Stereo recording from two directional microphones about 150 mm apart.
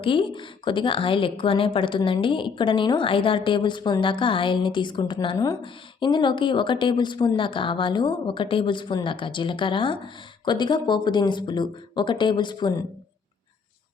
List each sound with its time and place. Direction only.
0.0 s a woman's voice: 35° left (ahead or behind)